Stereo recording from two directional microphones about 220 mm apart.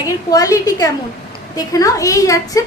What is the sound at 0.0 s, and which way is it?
A woman's voice, 15° left (ahead or behind).